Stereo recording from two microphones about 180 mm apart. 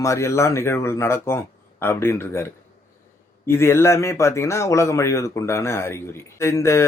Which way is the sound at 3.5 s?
15° left (ahead or behind).